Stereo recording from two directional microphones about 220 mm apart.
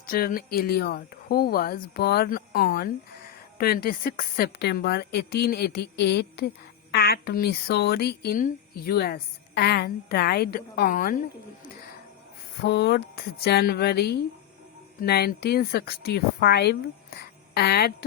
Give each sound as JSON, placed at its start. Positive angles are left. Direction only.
{"t": 0.0, "sound": "speech", "side_deg": 40}
{"t": 12.6, "sound": "speech", "side_deg": 50}